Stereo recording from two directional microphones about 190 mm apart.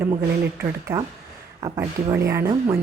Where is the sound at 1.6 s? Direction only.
15° right (ahead or behind).